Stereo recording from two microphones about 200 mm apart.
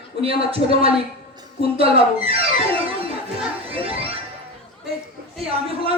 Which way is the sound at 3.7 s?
30° right (ahead or behind).